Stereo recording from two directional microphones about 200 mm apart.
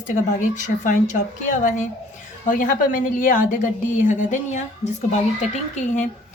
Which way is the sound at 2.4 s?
40° left (ahead or behind).